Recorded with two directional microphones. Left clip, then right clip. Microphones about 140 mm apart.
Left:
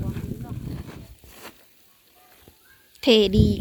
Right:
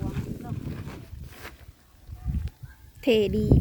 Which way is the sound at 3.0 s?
Centre (ahead or behind).